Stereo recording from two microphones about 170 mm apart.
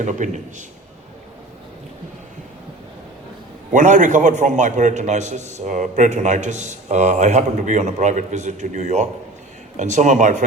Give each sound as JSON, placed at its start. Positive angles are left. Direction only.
{"t": 0.0, "sound": "a man's voice", "side_deg": -50}
{"t": 3.7, "sound": "a man's voice", "side_deg": -50}